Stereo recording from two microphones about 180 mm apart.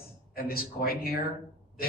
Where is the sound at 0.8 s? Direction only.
55° left (ahead or behind).